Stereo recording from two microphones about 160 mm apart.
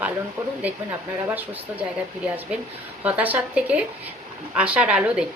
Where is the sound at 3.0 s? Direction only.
10° right (ahead or behind).